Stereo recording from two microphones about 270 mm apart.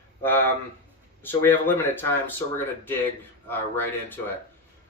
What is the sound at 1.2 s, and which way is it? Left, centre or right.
Speech, centre.